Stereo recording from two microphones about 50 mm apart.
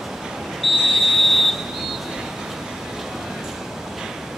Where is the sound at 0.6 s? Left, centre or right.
Centre.